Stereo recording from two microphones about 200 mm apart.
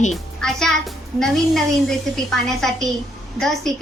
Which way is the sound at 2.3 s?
Centre (ahead or behind).